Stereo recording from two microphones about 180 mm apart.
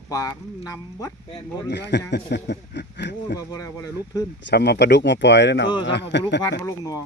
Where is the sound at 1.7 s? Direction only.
70° left (ahead or behind).